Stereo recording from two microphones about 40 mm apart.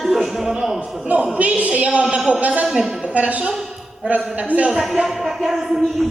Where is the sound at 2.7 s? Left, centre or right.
Centre.